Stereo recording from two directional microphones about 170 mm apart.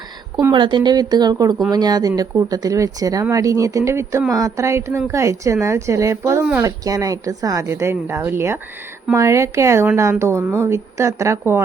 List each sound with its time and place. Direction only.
0.3 s speech: 25° right (ahead or behind)